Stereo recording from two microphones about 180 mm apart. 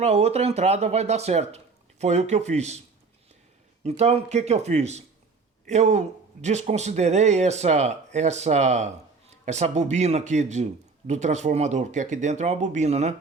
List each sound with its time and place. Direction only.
0.0 s a man's voice: 35° right (ahead or behind)
3.8 s a man's voice: 35° right (ahead or behind)